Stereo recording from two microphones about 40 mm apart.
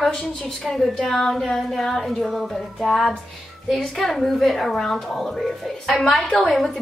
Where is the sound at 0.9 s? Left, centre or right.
Centre.